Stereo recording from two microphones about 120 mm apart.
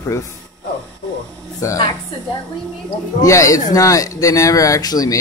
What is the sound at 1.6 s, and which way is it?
Speech, 25° left (ahead or behind).